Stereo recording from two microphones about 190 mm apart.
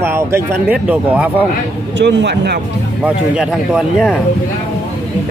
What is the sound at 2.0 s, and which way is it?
Speech, 70° right (ahead or behind).